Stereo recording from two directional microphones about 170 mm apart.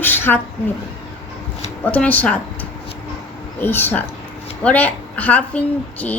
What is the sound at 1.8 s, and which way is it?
A woman's voice, 10° left (ahead or behind).